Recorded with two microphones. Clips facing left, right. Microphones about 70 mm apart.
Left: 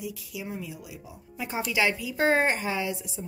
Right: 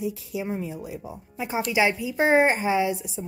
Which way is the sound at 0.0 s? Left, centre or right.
Right.